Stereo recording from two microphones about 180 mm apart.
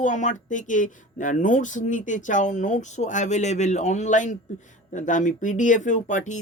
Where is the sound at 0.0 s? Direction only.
45° left (ahead or behind).